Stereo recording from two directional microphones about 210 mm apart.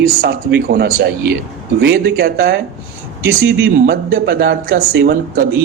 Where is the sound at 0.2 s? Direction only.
45° right (ahead or behind).